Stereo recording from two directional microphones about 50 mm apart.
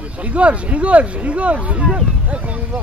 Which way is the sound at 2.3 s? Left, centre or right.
Right.